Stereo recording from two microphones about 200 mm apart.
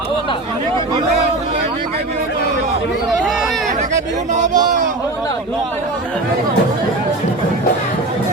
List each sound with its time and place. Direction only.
3.1 s chatter: centre (ahead or behind)
4.3 s a man's voice: 35° right (ahead or behind)